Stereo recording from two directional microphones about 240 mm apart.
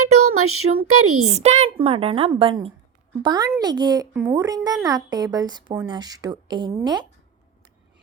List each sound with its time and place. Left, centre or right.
0.0 s a sound: right
0.9 s speech: right
1.2 s a woman's voice: right